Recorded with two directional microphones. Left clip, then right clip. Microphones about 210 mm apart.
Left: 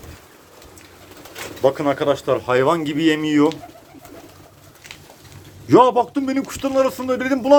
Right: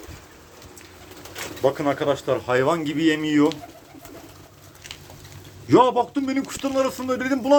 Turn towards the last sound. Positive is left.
turn(degrees=5)  # may be behind; listen again after turning